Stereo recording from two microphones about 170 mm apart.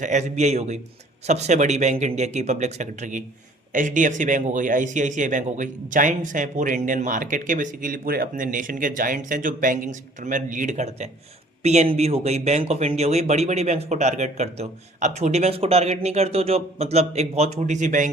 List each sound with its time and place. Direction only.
0.0 s speech: 45° right (ahead or behind)